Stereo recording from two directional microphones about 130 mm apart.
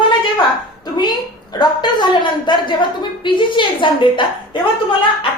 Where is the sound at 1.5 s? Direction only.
35° left (ahead or behind).